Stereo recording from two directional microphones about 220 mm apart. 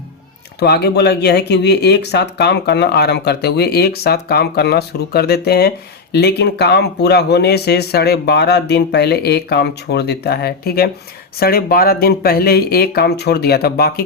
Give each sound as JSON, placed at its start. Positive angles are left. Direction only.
{"t": 0.6, "sound": "speech", "side_deg": 50}